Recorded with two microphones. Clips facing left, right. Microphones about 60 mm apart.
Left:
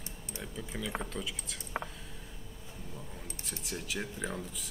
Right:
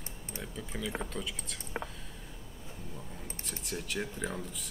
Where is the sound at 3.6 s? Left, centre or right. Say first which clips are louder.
Right 2 dB; centre.